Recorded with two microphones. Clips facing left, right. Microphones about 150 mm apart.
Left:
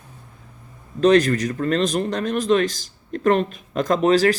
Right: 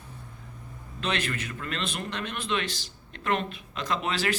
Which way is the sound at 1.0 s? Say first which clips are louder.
Left 15 dB; 40° left (ahead or behind).